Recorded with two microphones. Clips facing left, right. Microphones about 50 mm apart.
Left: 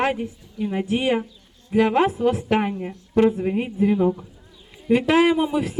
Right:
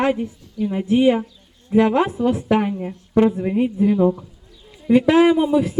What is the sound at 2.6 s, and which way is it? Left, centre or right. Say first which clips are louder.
Speech: right 2 dB; centre.